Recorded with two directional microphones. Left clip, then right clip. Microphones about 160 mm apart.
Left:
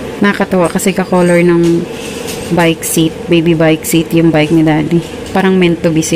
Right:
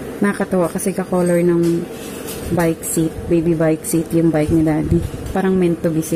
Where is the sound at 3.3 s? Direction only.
5° right (ahead or behind).